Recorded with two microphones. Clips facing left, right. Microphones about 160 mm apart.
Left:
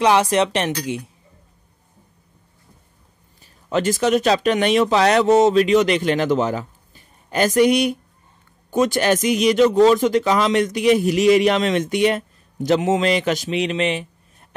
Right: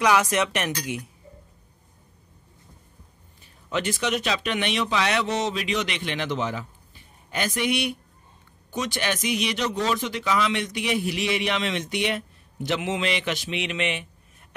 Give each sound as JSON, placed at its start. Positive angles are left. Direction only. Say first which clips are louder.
{"t": 0.0, "sound": "speech", "louder": "left 5 dB", "side_deg": 30}
{"t": 3.7, "sound": "speech", "louder": "left 8 dB", "side_deg": 40}